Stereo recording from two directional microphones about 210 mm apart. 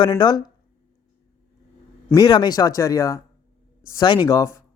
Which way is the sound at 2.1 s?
20° left (ahead or behind).